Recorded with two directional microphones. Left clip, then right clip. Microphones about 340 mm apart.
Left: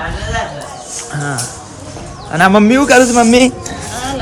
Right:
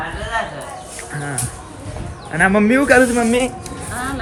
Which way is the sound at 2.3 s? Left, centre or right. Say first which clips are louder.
Left 5 dB; centre.